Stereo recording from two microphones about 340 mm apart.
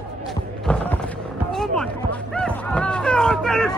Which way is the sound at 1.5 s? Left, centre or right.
Centre.